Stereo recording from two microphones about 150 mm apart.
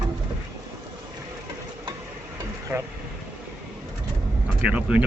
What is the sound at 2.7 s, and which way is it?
Speech, 10° right (ahead or behind).